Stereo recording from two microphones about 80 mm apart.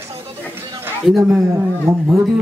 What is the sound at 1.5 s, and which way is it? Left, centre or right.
Speech, right.